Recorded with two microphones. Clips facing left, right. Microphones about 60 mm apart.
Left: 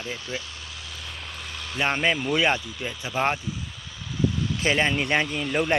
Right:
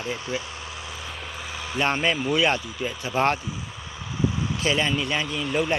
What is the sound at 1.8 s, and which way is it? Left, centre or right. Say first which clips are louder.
Speech: even; centre.